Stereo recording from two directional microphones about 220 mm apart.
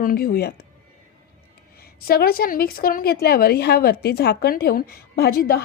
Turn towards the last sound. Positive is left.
turn(degrees=45)  # may be behind; listen again after turning